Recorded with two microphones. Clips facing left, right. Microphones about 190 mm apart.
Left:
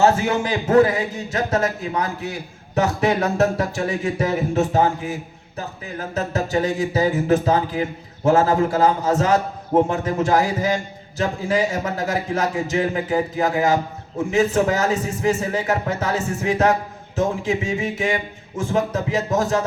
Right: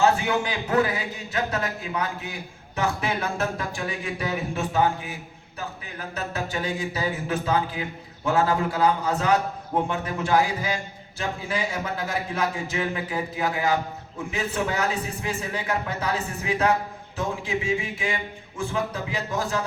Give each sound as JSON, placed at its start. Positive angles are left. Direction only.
{"t": 0.0, "sound": "a man's voice", "side_deg": 40}
{"t": 2.7, "sound": "music", "side_deg": 40}
{"t": 14.2, "sound": "a man's voice", "side_deg": 45}
{"t": 17.2, "sound": "music", "side_deg": 40}